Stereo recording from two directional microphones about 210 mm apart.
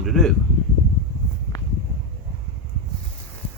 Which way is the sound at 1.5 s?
15° left (ahead or behind).